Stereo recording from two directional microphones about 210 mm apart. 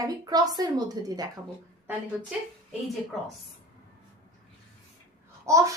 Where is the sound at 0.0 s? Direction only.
20° right (ahead or behind).